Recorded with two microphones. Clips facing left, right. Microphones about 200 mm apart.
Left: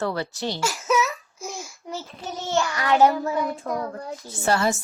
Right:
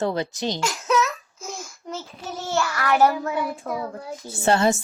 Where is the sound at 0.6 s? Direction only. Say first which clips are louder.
Even; 5° left (ahead or behind).